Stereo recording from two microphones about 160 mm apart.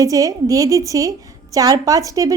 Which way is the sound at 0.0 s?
20° right (ahead or behind).